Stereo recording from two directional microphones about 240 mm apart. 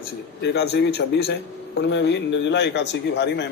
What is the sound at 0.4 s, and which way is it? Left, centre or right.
A man's voice, left.